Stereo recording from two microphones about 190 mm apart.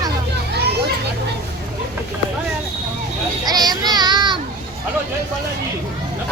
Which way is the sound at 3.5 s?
20° right (ahead or behind).